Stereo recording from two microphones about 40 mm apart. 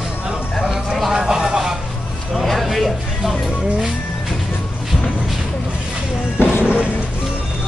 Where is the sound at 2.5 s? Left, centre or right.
Centre.